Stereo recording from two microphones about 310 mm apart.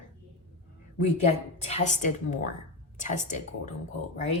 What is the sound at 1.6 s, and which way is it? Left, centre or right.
Speech, left.